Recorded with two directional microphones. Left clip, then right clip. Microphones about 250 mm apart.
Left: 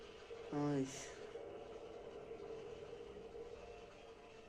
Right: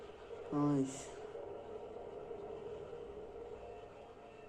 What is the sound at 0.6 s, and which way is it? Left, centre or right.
Speech, centre.